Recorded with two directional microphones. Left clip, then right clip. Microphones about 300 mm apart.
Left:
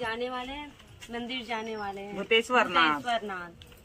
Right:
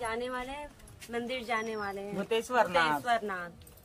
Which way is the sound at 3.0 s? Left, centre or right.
Centre.